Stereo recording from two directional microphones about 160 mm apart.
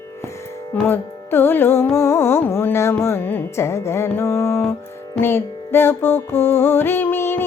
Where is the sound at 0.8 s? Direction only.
15° left (ahead or behind).